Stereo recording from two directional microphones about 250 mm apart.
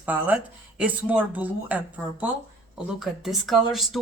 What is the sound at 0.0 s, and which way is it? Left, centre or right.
Speech, centre.